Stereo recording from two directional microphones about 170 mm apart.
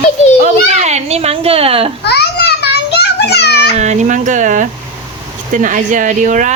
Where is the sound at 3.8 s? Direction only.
45° right (ahead or behind).